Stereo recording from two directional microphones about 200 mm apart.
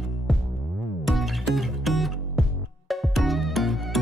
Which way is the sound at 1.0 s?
Centre (ahead or behind).